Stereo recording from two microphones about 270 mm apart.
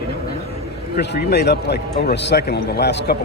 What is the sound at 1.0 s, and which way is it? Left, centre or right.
A man's voice, left.